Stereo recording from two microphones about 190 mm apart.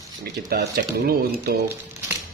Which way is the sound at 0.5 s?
55° right (ahead or behind).